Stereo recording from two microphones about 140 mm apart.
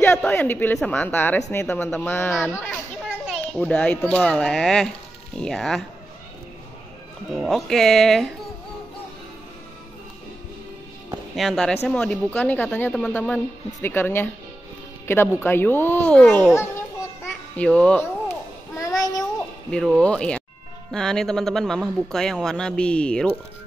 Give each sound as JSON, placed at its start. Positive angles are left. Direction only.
{"t": 0.0, "sound": "a sound", "side_deg": 15}
{"t": 0.7, "sound": "a child's voice", "side_deg": 10}
{"t": 7.3, "sound": "speech", "side_deg": 0}
{"t": 11.3, "sound": "a child's voice", "side_deg": 0}
{"t": 17.6, "sound": "a child's voice", "side_deg": 10}
{"t": 18.3, "sound": "babbling", "side_deg": 25}
{"t": 20.0, "sound": "a child's voice", "side_deg": 5}